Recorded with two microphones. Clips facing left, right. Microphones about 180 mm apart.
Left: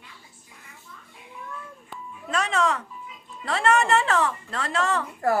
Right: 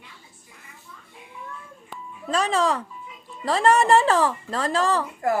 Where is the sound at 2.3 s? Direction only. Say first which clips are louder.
Right 2 dB; 30° right (ahead or behind).